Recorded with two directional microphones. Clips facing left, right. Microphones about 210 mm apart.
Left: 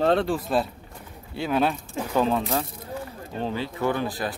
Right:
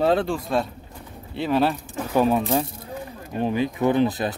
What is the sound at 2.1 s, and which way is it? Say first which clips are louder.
Speech: right 3 dB; 15° right (ahead or behind).